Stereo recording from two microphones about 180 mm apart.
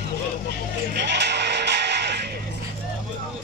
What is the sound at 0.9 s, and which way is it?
Music, 70° right (ahead or behind).